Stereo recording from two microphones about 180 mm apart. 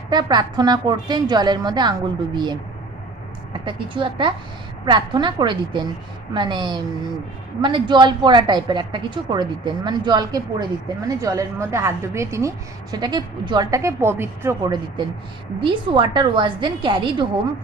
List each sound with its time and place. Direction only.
0.1 s a woman's voice: 25° right (ahead or behind)
3.7 s a woman's voice: 25° right (ahead or behind)